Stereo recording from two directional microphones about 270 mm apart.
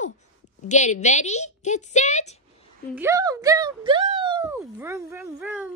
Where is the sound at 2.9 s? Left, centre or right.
Centre.